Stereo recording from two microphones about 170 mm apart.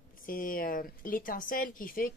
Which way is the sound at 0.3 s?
55° left (ahead or behind).